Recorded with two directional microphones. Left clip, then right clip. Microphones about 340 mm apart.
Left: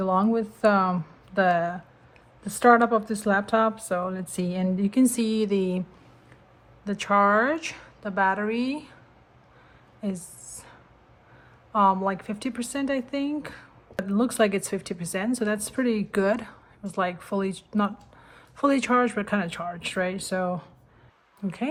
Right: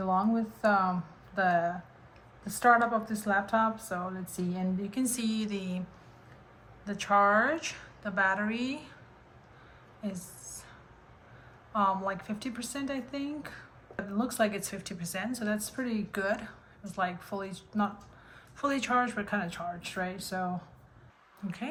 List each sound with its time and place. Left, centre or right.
0.2 s speech: left
6.8 s speech: left
11.7 s speech: centre